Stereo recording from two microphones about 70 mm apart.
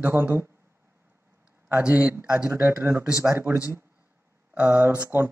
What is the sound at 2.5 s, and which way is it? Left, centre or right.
Speech, right.